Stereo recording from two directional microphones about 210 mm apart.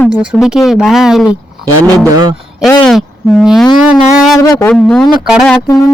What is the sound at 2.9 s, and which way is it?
Speech, centre (ahead or behind).